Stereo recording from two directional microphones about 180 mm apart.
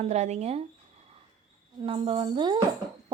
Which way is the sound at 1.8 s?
30° right (ahead or behind).